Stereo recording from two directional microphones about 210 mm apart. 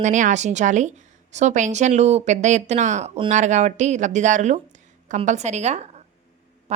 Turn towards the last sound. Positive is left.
turn(degrees=-30)  # may be behind; listen again after turning